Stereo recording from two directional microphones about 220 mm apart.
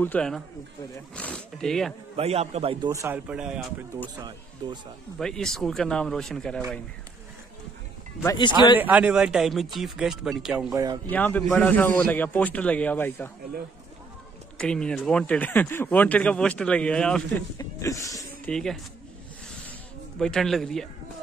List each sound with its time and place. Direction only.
0.0 s speech: 5° left (ahead or behind)
2.1 s a man's voice: 30° right (ahead or behind); by 3.6 s 5° right (ahead or behind)
4.6 s a man's voice: 20° right (ahead or behind)
5.2 s speech: centre (ahead or behind)
8.2 s speech: 20° left (ahead or behind)
8.7 s speech: 5° right (ahead or behind)
10.7 s speech: 15° right (ahead or behind)
11.1 s a man's voice: 5° left (ahead or behind)
14.6 s speech: 5° left (ahead or behind)
18.5 s speech: 5° left (ahead or behind)
20.2 s speech: centre (ahead or behind)